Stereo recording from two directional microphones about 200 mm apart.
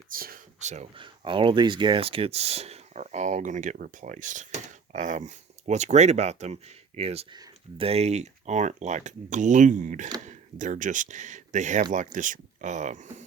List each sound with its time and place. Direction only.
0.1 s speech: 45° right (ahead or behind)